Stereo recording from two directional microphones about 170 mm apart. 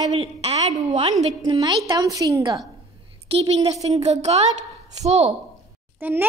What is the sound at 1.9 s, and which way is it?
Speech, 20° right (ahead or behind).